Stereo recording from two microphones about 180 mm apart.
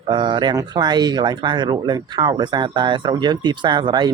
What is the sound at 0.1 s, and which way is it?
Speech, 25° right (ahead or behind).